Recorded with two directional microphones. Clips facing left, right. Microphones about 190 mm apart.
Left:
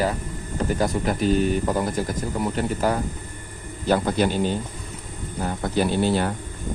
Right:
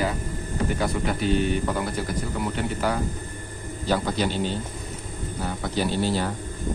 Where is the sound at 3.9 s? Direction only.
55° left (ahead or behind).